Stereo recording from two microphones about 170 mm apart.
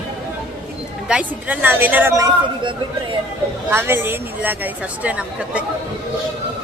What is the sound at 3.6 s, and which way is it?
A woman's voice, 15° right (ahead or behind).